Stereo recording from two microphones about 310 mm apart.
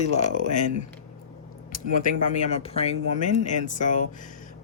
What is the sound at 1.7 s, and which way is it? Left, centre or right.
Speech, left.